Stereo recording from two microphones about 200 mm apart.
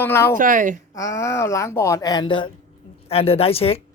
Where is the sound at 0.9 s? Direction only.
15° left (ahead or behind).